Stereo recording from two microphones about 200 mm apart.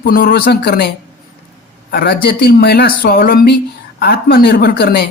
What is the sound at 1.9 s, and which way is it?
A woman's voice, 55° left (ahead or behind).